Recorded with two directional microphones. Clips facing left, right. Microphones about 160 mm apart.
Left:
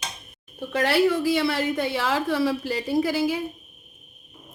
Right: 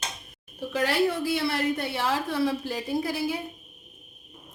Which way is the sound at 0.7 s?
85° left.